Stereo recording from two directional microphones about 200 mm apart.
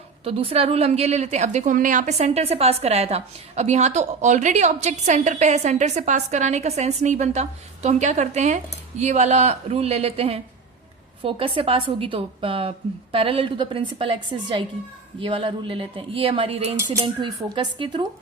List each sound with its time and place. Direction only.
0.3 s a woman's voice: 30° right (ahead or behind)